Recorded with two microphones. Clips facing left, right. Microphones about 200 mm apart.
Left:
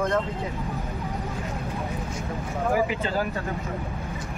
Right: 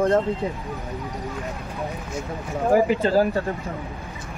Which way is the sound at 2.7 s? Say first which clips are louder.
Right 8 dB; 35° right (ahead or behind).